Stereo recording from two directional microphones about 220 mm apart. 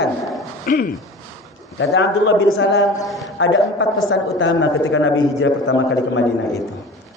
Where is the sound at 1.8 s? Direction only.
60° left (ahead or behind).